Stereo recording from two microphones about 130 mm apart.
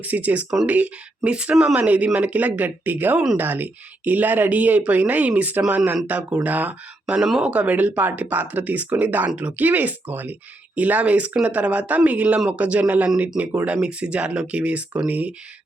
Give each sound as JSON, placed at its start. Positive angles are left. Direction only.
{"t": 0.0, "sound": "speech", "side_deg": -15}
{"t": 13.8, "sound": "speech", "side_deg": -10}